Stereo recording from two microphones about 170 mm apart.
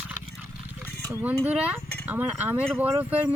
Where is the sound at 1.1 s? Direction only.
15° right (ahead or behind).